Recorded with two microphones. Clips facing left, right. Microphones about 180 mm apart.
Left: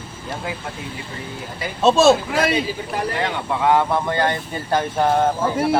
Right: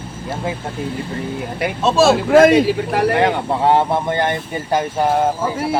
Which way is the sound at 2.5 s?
70° right (ahead or behind).